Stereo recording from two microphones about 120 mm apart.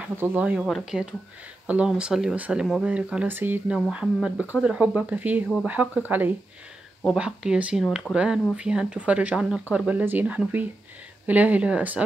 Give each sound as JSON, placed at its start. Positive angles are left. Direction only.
{"t": 0.2, "sound": "speech", "side_deg": -15}
{"t": 3.7, "sound": "speech", "side_deg": -5}